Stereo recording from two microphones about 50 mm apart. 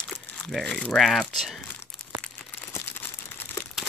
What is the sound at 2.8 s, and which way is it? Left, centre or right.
Crumpling, left.